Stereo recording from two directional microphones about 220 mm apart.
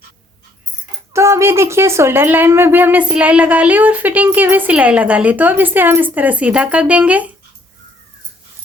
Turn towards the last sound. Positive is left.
turn(degrees=-5)  # may be behind; listen again after turning